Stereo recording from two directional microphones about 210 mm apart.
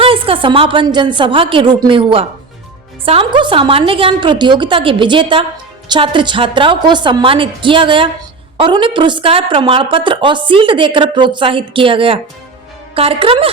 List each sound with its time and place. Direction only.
0.0 s a woman's voice: 25° right (ahead or behind)